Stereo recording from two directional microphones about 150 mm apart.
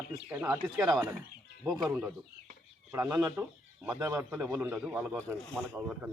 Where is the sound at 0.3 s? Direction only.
15° right (ahead or behind).